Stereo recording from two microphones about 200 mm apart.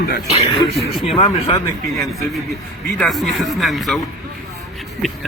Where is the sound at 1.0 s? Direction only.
30° left (ahead or behind).